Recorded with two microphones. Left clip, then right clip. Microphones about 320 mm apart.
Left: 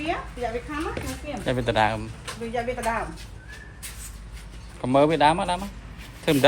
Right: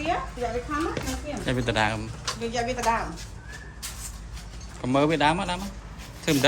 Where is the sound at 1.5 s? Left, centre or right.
Centre.